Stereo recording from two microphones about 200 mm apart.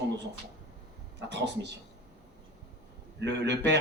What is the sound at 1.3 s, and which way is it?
Speech, 60° right (ahead or behind).